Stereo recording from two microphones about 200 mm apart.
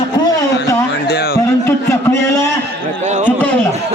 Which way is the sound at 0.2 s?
20° left (ahead or behind).